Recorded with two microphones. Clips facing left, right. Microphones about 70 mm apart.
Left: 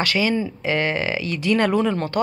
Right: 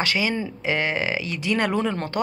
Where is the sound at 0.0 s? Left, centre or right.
Right.